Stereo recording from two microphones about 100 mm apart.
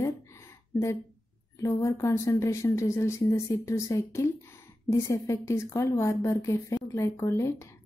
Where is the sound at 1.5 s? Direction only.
30° left (ahead or behind).